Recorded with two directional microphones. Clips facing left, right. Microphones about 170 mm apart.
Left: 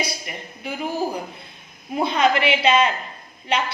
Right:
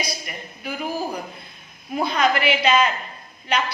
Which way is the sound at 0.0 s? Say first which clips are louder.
Left 2 dB; 25° left (ahead or behind).